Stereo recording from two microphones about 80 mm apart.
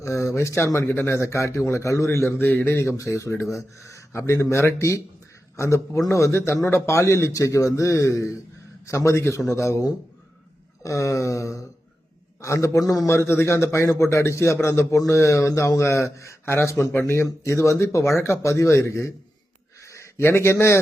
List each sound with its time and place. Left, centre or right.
0.0 s a man's voice: left
2.5 s a man's voice: left
12.8 s a man's voice: left
13.1 s a man's voice: left